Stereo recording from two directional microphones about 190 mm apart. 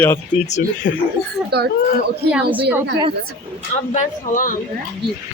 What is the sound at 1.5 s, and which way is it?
Speech, 60° right (ahead or behind).